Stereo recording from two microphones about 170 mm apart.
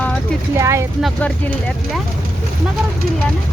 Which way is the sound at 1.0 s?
10° left (ahead or behind).